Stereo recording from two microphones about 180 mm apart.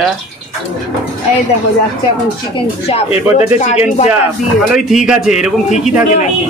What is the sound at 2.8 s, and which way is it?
Speech, 35° left (ahead or behind).